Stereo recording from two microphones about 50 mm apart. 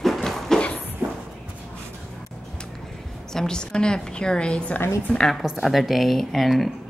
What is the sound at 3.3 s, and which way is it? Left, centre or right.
A woman's voice, centre.